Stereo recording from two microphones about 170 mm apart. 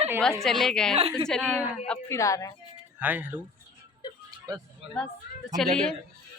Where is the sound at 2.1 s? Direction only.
20° left (ahead or behind).